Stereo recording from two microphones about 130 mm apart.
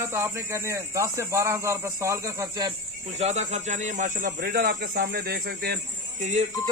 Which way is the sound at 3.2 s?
60° right (ahead or behind).